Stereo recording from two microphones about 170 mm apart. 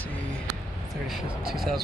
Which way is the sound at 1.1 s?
Centre (ahead or behind).